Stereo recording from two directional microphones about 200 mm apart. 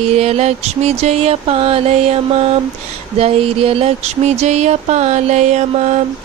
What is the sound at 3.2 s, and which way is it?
Music, 30° right (ahead or behind).